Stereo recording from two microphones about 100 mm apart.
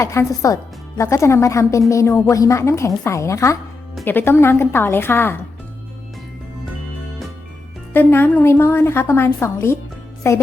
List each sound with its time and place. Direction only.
0.0 s a woman's voice: 30° left (ahead or behind)
7.9 s a woman's voice: 20° left (ahead or behind)